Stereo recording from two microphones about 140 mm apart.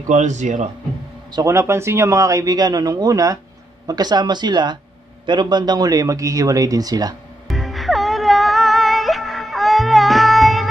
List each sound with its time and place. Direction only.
0.1 s a man's voice: 60° right (ahead or behind)
1.3 s speech: 20° right (ahead or behind)
7.4 s music: centre (ahead or behind)